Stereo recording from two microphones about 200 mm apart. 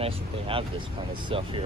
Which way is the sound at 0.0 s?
25° right (ahead or behind).